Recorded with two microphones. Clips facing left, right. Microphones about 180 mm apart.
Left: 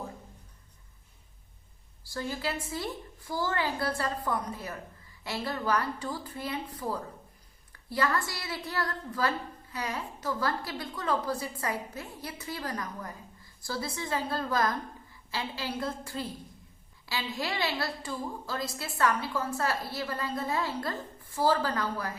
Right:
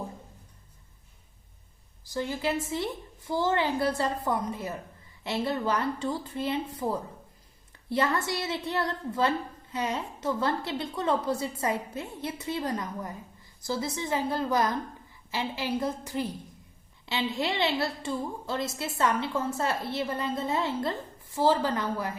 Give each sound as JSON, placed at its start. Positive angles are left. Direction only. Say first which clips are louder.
{"t": 2.0, "sound": "a woman's voice", "louder": "right 4 dB", "side_deg": -20}